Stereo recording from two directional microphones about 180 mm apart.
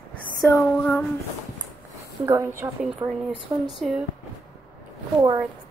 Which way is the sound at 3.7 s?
Centre (ahead or behind).